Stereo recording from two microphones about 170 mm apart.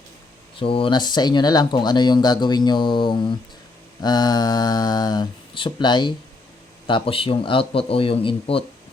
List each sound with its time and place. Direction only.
0.6 s a man's voice: 30° left (ahead or behind)